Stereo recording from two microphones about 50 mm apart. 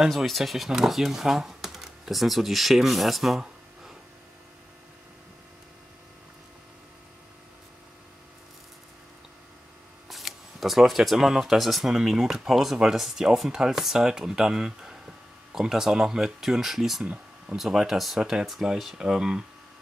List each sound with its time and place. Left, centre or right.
0.1 s speech: centre
10.0 s speech: centre
17.0 s a sound: right
17.6 s speech: centre